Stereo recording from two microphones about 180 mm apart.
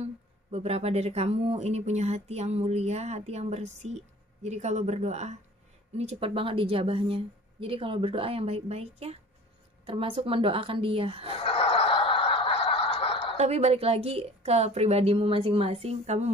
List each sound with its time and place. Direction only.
0.0 s speech: 35° right (ahead or behind)
11.4 s snicker: 30° left (ahead or behind)
13.4 s speech: 35° right (ahead or behind)